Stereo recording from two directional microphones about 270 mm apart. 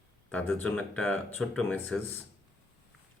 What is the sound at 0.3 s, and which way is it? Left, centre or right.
Speech, centre.